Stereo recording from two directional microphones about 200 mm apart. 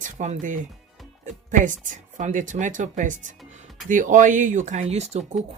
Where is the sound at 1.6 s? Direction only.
40° right (ahead or behind).